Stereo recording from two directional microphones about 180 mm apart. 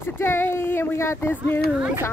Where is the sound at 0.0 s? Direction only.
15° left (ahead or behind).